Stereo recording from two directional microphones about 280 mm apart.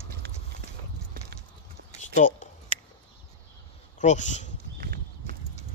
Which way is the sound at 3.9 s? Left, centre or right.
Left.